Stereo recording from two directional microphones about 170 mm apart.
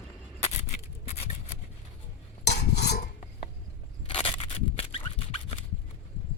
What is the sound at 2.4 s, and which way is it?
Cutlery, 75° left (ahead or behind).